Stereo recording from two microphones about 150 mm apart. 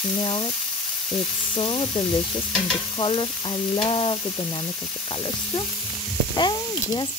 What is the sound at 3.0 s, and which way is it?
Speech, 35° left (ahead or behind).